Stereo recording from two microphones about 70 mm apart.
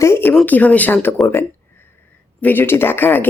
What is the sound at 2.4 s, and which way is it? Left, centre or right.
Speech, left.